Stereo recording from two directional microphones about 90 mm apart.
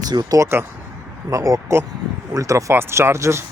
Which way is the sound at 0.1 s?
50° right (ahead or behind).